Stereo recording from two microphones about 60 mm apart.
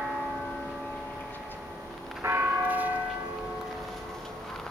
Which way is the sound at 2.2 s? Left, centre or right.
Right.